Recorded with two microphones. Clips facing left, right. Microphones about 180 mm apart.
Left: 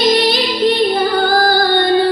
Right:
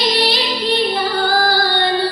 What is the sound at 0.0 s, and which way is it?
Female singing, 50° left (ahead or behind).